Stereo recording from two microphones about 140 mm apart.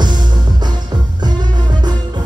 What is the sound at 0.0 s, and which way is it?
Music, 30° right (ahead or behind).